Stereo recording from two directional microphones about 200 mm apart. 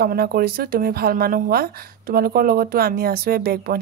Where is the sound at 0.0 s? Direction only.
50° right (ahead or behind).